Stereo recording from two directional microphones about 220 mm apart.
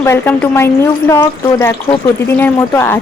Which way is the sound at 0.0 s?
10° left (ahead or behind).